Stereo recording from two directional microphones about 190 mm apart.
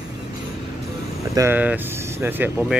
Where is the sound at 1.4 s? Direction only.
10° right (ahead or behind).